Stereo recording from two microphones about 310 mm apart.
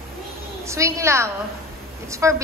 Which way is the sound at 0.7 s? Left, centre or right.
Centre.